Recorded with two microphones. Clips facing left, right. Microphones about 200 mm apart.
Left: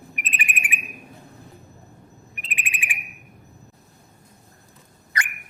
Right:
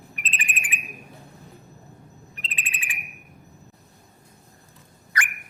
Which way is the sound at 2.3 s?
15° left (ahead or behind).